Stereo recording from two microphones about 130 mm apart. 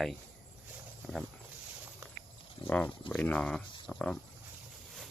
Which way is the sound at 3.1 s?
5° left (ahead or behind).